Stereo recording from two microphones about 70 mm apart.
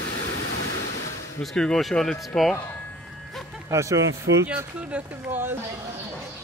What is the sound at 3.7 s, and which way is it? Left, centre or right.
Speech, right.